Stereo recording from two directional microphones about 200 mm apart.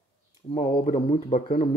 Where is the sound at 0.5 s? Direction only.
20° left (ahead or behind).